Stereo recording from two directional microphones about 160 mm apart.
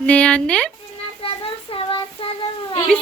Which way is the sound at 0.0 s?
5° left (ahead or behind).